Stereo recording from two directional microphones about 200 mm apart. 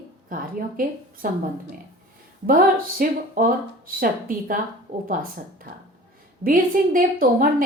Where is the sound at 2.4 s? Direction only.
45° right (ahead or behind).